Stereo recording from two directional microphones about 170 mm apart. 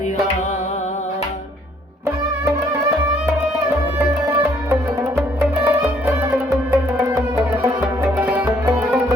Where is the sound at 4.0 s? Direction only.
15° right (ahead or behind).